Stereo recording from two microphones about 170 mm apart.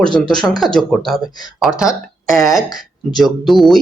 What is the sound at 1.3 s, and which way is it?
Speech, 25° left (ahead or behind).